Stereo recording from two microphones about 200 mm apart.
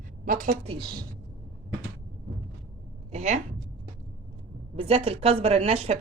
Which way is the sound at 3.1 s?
35° right (ahead or behind).